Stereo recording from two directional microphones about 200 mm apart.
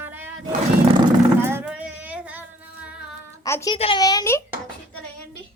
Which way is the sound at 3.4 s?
15° left (ahead or behind).